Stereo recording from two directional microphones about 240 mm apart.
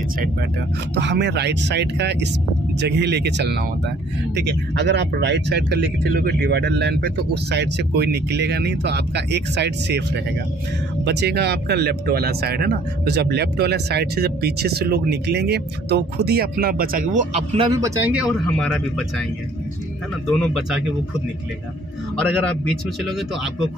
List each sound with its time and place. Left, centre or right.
0.9 s speech: right
11.1 s speech: right; by 18.2 s centre
18.6 s speech: centre
20.2 s speech: centre
22.4 s speech: centre